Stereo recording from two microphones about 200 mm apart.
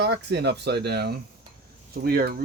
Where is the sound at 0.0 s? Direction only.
60° right (ahead or behind).